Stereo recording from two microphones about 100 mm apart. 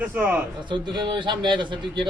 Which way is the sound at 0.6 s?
50° right (ahead or behind).